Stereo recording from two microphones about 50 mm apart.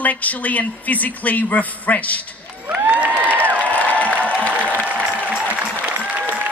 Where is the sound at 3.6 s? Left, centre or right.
Left.